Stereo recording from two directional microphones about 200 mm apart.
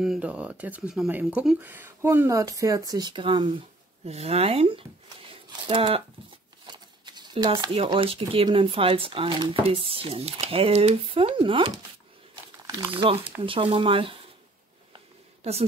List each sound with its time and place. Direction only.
0.0 s speech: 5° right (ahead or behind); by 14.2 s 25° right (ahead or behind)